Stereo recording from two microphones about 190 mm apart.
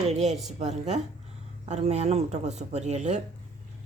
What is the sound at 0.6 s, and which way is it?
A woman's voice, 35° right (ahead or behind).